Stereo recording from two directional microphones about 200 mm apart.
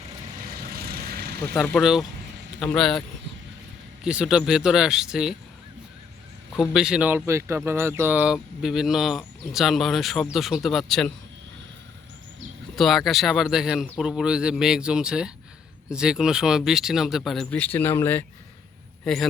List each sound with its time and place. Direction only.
0.6 s vehicle: 50° right (ahead or behind)
1.6 s speech: centre (ahead or behind)
4.0 s speech: 5° right (ahead or behind)
6.5 s speech: centre (ahead or behind)
12.7 s speech: centre (ahead or behind)